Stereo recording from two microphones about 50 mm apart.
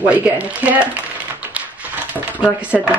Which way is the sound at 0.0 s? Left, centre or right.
Right.